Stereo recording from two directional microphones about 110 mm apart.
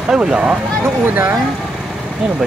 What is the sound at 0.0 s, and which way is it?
Speech, 5° right (ahead or behind).